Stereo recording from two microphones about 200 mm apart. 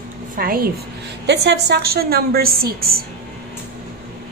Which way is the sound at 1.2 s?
55° right (ahead or behind).